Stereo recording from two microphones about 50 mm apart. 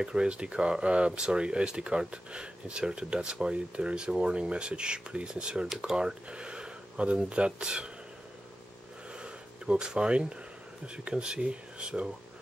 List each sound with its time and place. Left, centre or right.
0.0 s speech: centre
9.2 s a sound: centre
11.1 s speech: centre